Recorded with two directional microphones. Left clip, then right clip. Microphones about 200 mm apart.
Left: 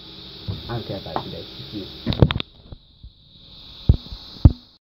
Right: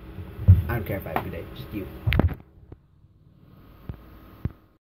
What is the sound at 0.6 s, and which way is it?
Speech, 30° right (ahead or behind).